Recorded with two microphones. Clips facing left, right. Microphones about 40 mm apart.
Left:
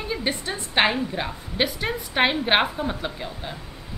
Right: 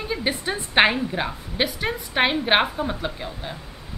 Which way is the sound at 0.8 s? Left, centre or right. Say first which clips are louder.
Right 3 dB; centre.